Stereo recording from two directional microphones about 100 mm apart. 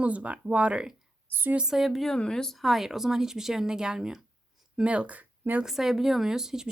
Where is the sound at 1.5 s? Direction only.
5° right (ahead or behind).